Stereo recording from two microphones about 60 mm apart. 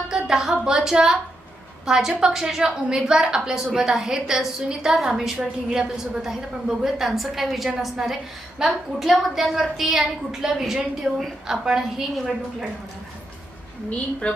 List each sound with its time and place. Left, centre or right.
0.1 s a woman's voice: centre
14.2 s a woman's voice: left